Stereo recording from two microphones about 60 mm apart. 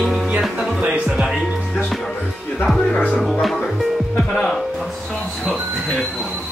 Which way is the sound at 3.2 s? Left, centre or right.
Centre.